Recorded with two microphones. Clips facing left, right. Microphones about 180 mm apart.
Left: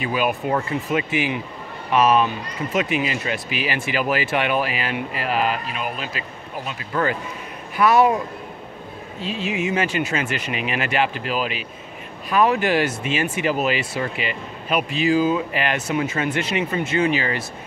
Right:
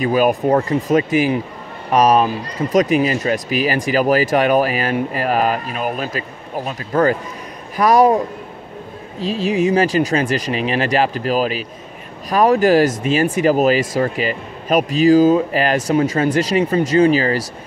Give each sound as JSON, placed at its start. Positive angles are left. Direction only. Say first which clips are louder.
{"t": 0.0, "sound": "speech", "louder": "right 7 dB", "side_deg": -40}
{"t": 9.2, "sound": "speech", "louder": "right 8 dB", "side_deg": -40}